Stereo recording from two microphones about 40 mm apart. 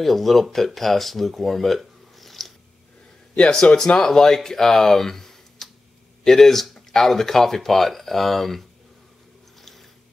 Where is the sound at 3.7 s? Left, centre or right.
Left.